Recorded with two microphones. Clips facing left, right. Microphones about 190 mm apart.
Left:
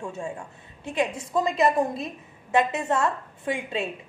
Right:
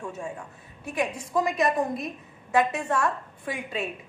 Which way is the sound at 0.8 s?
25° left (ahead or behind).